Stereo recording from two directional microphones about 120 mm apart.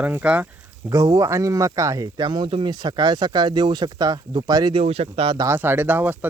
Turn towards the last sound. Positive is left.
turn(degrees=-15)  # may be behind; listen again after turning